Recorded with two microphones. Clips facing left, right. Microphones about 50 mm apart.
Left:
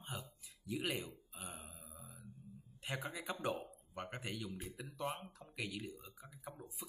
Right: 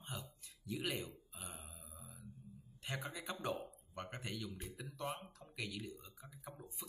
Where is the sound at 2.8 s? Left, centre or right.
Centre.